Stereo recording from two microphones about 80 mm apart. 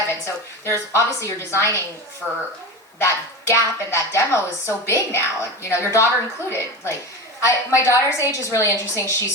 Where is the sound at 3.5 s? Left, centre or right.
Left.